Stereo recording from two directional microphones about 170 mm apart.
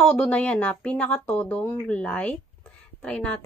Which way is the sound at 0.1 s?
5° left (ahead or behind).